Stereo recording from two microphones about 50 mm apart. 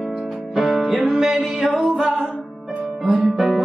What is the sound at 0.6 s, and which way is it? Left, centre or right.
Music, centre.